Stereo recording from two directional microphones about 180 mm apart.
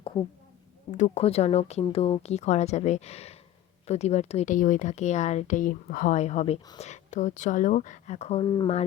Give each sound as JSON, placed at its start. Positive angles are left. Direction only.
{"t": 0.9, "sound": "speech", "side_deg": 40}
{"t": 8.4, "sound": "speech", "side_deg": 20}